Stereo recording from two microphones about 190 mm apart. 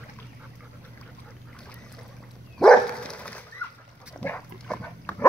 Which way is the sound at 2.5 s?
5° left (ahead or behind).